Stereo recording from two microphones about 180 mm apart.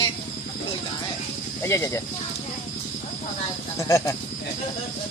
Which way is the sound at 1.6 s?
15° left (ahead or behind).